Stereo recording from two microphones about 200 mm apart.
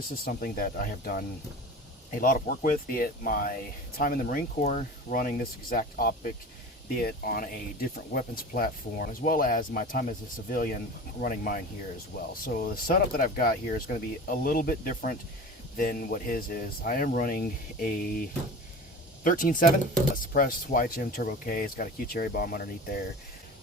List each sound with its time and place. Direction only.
0.3 s speech: 45° left (ahead or behind)